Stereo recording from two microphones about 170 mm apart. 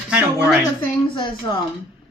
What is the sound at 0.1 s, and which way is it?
Speech, 5° right (ahead or behind).